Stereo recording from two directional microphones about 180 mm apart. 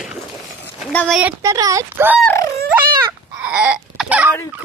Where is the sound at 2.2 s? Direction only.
15° left (ahead or behind).